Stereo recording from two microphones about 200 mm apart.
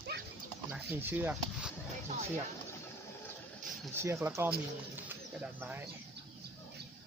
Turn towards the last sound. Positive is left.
turn(degrees=-10)  # may be behind; listen again after turning